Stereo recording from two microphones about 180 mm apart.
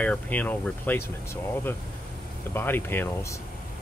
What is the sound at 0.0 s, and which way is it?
Speech, 10° left (ahead or behind).